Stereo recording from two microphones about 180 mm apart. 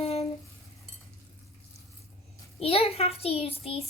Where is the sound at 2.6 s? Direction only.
30° left (ahead or behind).